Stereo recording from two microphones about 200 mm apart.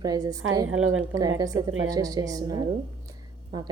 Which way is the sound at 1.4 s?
15° right (ahead or behind).